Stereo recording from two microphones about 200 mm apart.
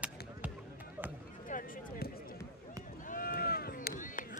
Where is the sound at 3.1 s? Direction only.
45° left (ahead or behind).